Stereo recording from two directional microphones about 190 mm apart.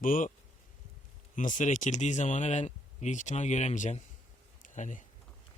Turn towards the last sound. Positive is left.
turn(degrees=40)  # may be behind; listen again after turning